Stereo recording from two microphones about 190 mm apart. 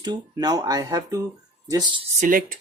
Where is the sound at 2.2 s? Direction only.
45° right (ahead or behind).